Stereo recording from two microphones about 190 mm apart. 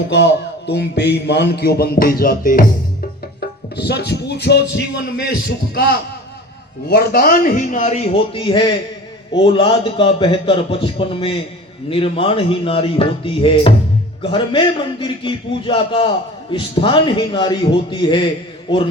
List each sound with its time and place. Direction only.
0.1 s speech: 65° left (ahead or behind); by 2.6 s 50° left (ahead or behind)
3.8 s a man's voice: 60° left (ahead or behind); by 18.3 s 25° left (ahead or behind)